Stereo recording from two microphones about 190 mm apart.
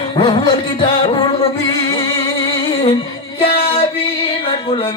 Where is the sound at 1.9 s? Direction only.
25° left (ahead or behind).